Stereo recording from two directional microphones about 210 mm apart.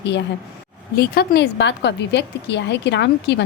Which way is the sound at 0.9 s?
45° left (ahead or behind).